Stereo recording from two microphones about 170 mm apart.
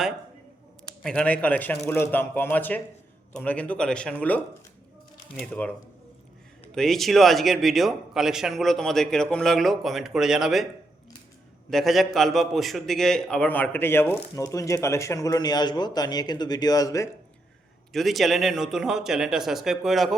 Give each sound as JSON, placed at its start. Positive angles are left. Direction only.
{"t": 1.0, "sound": "a man's voice", "side_deg": 5}
{"t": 5.4, "sound": "a man's voice", "side_deg": 10}
{"t": 11.7, "sound": "a man's voice", "side_deg": 0}
{"t": 17.9, "sound": "a man's voice", "side_deg": 0}